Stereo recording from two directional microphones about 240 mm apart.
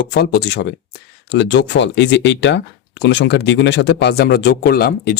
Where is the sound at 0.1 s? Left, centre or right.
Left.